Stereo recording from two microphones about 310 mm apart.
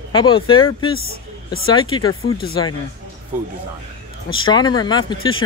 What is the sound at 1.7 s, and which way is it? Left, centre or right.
Speech, centre.